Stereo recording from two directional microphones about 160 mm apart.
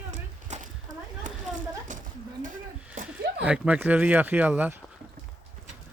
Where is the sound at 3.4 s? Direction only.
5° right (ahead or behind).